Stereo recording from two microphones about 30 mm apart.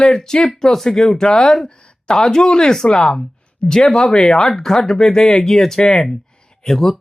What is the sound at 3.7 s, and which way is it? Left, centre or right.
Speech, centre.